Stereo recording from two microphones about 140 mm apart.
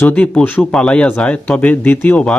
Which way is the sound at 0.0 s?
10° left (ahead or behind).